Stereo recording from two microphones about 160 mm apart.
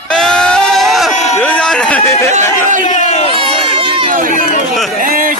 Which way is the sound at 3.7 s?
35° right (ahead or behind).